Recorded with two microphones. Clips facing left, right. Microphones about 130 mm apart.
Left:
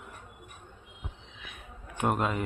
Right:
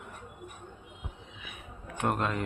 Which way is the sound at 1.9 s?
5° left (ahead or behind).